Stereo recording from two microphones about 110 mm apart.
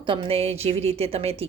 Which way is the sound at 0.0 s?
55° right (ahead or behind).